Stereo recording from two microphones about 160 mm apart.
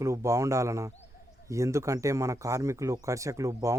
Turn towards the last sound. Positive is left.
turn(degrees=-20)  # may be behind; listen again after turning